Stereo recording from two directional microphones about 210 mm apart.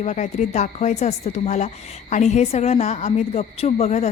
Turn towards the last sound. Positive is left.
turn(degrees=30)  # may be behind; listen again after turning